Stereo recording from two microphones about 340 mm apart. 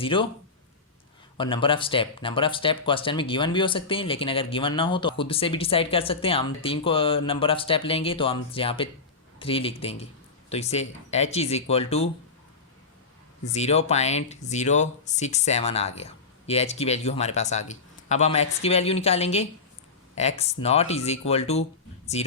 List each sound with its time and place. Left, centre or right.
0.0 s speech: centre
1.4 s speech: centre
13.4 s speech: centre